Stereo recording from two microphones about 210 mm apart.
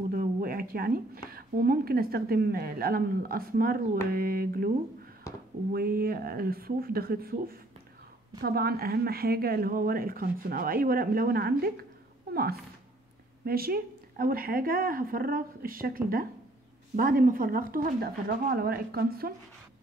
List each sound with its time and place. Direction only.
0.1 s speech: 45° right (ahead or behind)